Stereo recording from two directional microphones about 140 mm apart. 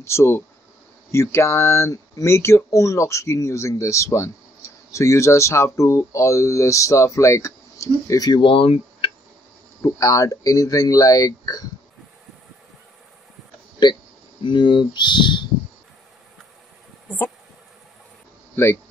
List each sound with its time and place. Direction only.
0.0 s speech: 20° left (ahead or behind); by 9.1 s 45° left (ahead or behind)
9.8 s speech: 25° left (ahead or behind)
14.4 s speech: 35° left (ahead or behind)
18.6 s speech: 15° left (ahead or behind)